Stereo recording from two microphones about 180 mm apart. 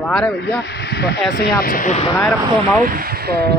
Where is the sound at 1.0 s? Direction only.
65° left (ahead or behind).